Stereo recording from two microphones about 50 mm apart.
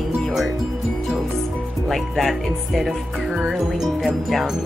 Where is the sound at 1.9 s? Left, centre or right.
Centre.